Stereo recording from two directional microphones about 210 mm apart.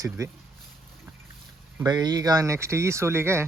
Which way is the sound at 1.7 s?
20° right (ahead or behind).